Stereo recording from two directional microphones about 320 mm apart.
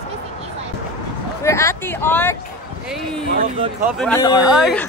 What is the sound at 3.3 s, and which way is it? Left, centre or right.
Speech, centre.